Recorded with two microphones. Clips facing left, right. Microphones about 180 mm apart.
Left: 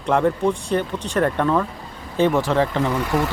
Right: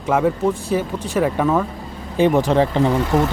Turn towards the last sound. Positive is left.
turn(degrees=-20)  # may be behind; listen again after turning